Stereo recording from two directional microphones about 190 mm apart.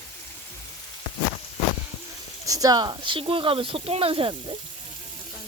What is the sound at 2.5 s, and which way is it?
Speech, 20° right (ahead or behind).